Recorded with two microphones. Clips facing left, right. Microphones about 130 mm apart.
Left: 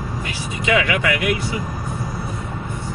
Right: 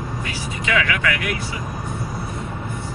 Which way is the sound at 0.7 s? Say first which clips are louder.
Left 3 dB; 20° left (ahead or behind).